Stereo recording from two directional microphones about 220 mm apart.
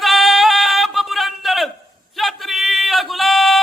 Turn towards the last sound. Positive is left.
turn(degrees=0)  # may be behind; listen again after turning